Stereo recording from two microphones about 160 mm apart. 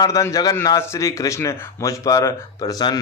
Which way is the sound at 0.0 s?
20° left (ahead or behind).